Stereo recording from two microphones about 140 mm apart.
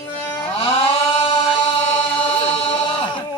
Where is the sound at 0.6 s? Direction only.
40° left (ahead or behind).